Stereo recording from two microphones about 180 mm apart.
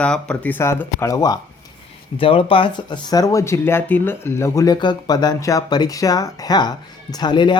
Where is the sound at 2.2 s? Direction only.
30° left (ahead or behind).